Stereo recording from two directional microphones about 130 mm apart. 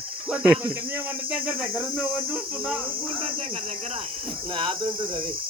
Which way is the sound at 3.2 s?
45° right (ahead or behind).